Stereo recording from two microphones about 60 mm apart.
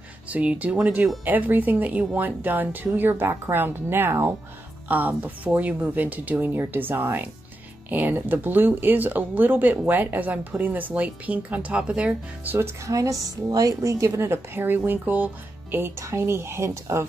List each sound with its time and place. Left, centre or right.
0.3 s speech: right
4.8 s speech: right
12.5 s a woman's voice: right
16.0 s a woman's voice: right